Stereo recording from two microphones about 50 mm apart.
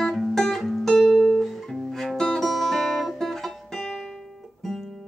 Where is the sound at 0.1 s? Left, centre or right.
Centre.